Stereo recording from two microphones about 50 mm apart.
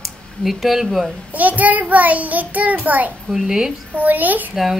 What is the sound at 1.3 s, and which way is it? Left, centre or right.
A child's voice, right.